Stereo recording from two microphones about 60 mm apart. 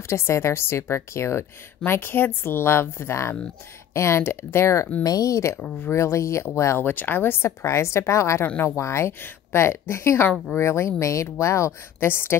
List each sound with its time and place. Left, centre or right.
0.1 s speech: left
1.9 s speech: left
5.0 s speech: left
5.9 s speech: left
6.8 s speech: left
7.6 s speech: left
12.1 s speech: left